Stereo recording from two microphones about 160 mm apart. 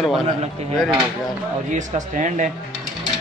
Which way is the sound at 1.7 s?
50° right (ahead or behind).